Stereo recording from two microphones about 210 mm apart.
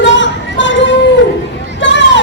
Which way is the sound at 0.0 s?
60° left (ahead or behind).